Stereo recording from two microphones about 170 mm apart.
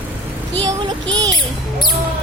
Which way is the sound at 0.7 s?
25° right (ahead or behind).